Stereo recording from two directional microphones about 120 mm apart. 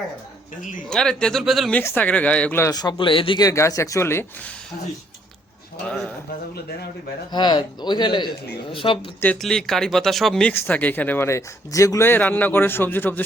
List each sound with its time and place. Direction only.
0.9 s speech: 5° left (ahead or behind)
2.0 s speech: 10° left (ahead or behind)
2.6 s speech: 30° left (ahead or behind)
3.0 s speech: 45° left (ahead or behind)
3.4 s speech: 25° left (ahead or behind)
5.8 s speech: 5° left (ahead or behind)
7.3 s speech: 35° left (ahead or behind)
9.4 s speech: 5° left (ahead or behind)
10.5 s speech: 15° left (ahead or behind)